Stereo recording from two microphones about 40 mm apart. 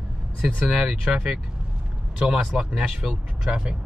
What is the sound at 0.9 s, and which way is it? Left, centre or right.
Speech, centre.